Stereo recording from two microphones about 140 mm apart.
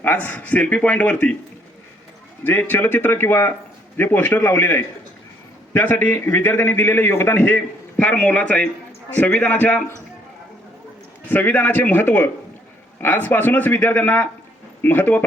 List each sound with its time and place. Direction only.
0.0 s a man's voice: 10° left (ahead or behind)
2.4 s a man's voice: 15° left (ahead or behind)
11.3 s a man's voice: 15° left (ahead or behind)